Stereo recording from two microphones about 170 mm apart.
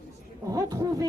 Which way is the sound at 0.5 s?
20° right (ahead or behind).